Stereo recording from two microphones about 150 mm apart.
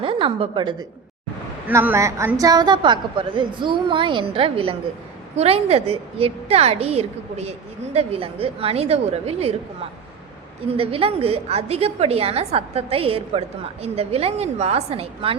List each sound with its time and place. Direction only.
0.0 s a woman's voice: 35° right (ahead or behind)
1.6 s a woman's voice: 15° right (ahead or behind); by 9.6 s 45° right (ahead or behind)
10.8 s a woman's voice: 40° right (ahead or behind)